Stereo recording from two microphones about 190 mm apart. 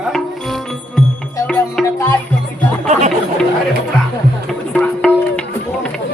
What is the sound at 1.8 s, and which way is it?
Music, 15° left (ahead or behind).